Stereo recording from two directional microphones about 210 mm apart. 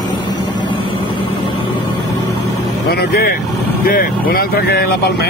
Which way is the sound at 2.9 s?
50° left (ahead or behind).